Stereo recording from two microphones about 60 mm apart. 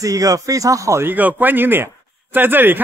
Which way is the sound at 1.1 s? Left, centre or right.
Right.